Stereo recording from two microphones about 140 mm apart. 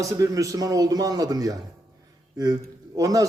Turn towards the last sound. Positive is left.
turn(degrees=-25)  # may be behind; listen again after turning